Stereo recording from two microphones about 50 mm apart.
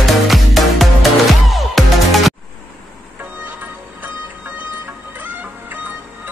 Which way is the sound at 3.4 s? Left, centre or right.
Right.